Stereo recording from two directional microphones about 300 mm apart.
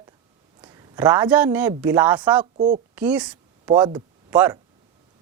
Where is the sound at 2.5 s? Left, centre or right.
Right.